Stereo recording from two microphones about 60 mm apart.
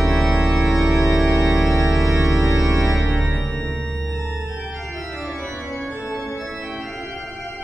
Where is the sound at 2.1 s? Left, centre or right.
Right.